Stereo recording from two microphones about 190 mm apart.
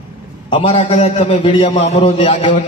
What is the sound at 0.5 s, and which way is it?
A man's voice, 30° left (ahead or behind).